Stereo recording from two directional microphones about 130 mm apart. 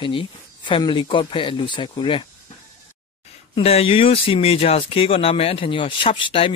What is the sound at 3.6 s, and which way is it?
Speech, 50° left (ahead or behind).